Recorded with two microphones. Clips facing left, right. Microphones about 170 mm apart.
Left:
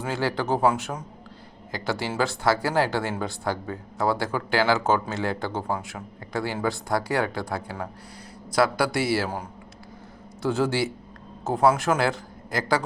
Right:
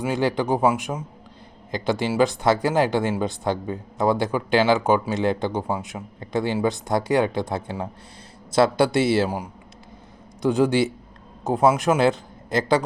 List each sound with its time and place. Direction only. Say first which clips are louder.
0.0 s speech: right 4 dB; 20° right (ahead or behind)
10.4 s a man's voice: right 5 dB; 15° right (ahead or behind)